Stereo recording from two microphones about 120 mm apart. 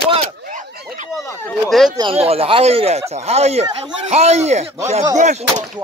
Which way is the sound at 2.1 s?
55° right (ahead or behind).